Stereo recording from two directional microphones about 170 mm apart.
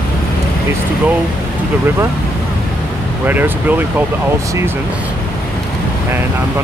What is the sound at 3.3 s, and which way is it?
Speech, 10° right (ahead or behind).